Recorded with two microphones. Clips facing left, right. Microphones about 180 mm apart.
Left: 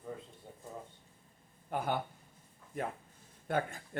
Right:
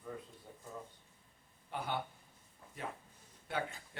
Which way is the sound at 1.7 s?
45° left (ahead or behind).